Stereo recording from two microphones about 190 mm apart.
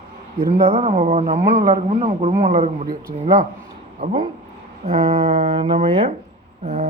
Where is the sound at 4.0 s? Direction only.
30° right (ahead or behind).